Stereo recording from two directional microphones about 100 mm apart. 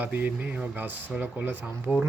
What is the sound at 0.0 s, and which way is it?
Speech, 15° right (ahead or behind).